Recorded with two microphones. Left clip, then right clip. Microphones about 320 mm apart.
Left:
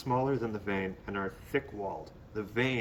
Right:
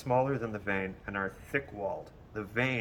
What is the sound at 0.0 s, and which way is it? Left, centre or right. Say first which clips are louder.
Speech: right 1 dB; centre.